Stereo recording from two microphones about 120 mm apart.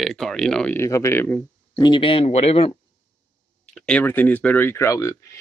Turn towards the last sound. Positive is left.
turn(degrees=25)  # may be behind; listen again after turning